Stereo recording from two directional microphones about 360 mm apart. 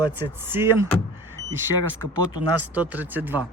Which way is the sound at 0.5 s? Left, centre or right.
Centre.